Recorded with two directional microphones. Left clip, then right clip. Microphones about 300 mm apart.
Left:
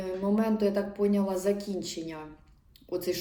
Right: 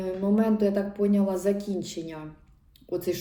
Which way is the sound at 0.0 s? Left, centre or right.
Centre.